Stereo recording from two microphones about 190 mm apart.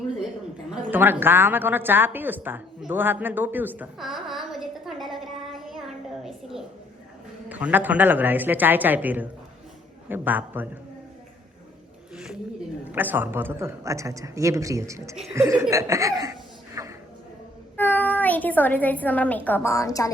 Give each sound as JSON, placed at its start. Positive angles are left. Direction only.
{"t": 0.7, "sound": "a woman's voice", "side_deg": -10}
{"t": 6.2, "sound": "a sound", "side_deg": 0}
{"t": 7.4, "sound": "a man's voice", "side_deg": -10}
{"t": 12.1, "sound": "a man's voice", "side_deg": -5}
{"t": 16.8, "sound": "a sound", "side_deg": -15}
{"t": 17.7, "sound": "a woman's voice", "side_deg": 10}